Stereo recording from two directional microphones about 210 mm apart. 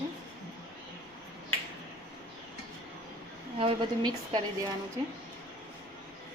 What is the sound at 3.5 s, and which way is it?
Speech, 25° right (ahead or behind).